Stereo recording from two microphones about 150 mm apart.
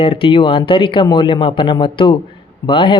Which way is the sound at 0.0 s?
40° left (ahead or behind).